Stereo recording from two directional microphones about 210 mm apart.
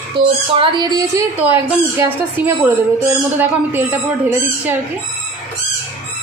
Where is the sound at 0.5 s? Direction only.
25° right (ahead or behind).